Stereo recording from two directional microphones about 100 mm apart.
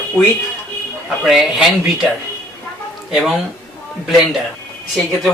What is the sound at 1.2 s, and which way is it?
Speech, 5° right (ahead or behind).